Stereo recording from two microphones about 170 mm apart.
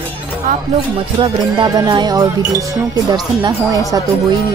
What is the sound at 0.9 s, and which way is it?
Music, 25° right (ahead or behind).